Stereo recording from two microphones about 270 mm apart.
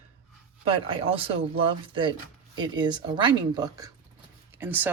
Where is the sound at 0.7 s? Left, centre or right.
Right.